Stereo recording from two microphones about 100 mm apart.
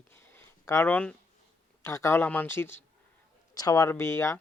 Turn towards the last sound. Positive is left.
turn(degrees=25)  # may be behind; listen again after turning